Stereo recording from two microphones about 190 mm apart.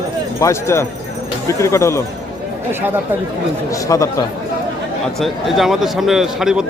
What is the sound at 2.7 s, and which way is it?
Speech, 10° right (ahead or behind).